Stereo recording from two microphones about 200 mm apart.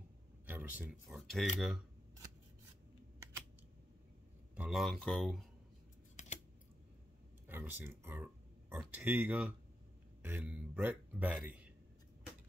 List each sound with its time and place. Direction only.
0.5 s speech: 5° right (ahead or behind)
4.6 s speech: centre (ahead or behind)
6.1 s typing: 35° left (ahead or behind)
7.4 s speech: 10° right (ahead or behind)